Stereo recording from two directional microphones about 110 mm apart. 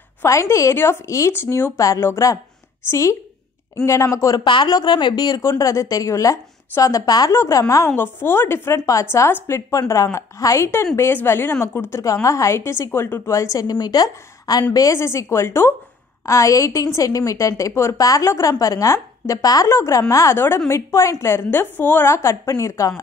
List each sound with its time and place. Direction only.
0.2 s a woman's voice: 25° left (ahead or behind)
4.5 s a woman's voice: 40° left (ahead or behind)